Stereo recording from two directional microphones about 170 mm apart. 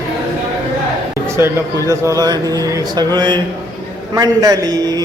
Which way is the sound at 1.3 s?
15° right (ahead or behind).